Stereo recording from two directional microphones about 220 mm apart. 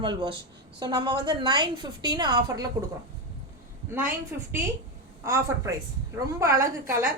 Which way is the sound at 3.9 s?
10° right (ahead or behind).